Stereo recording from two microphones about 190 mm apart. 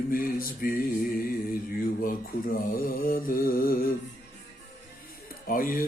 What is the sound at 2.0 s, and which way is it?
Mantra, 50° left (ahead or behind).